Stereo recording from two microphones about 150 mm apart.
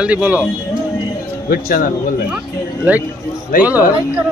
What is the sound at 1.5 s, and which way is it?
Speech, 70° left (ahead or behind).